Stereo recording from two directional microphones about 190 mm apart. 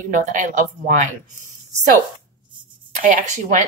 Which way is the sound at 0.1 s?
40° right (ahead or behind).